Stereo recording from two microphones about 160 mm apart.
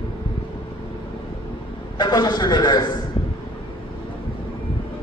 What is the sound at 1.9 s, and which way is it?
Speech, 25° left (ahead or behind).